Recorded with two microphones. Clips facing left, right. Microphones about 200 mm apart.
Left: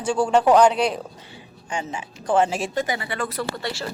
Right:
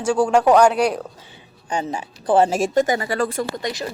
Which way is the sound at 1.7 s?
40° right (ahead or behind).